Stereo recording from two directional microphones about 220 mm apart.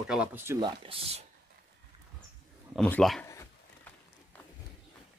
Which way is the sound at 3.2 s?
15° left (ahead or behind).